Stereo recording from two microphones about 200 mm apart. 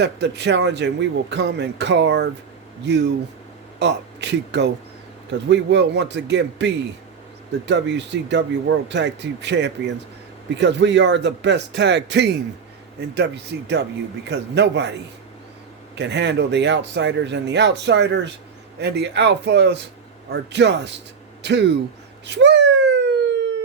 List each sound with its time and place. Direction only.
0.0 s a man's voice: 60° right (ahead or behind)
7.7 s a man's voice: 60° right (ahead or behind)
16.0 s a man's voice: 60° right (ahead or behind)
22.3 s a sound: 60° right (ahead or behind)